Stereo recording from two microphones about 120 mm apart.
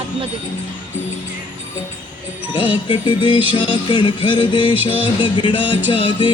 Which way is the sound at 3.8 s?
45° left (ahead or behind).